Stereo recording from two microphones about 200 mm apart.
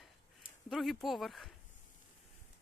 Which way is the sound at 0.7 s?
Centre (ahead or behind).